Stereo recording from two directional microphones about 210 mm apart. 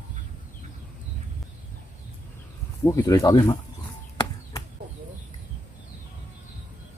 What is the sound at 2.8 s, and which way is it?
Speech, 15° left (ahead or behind).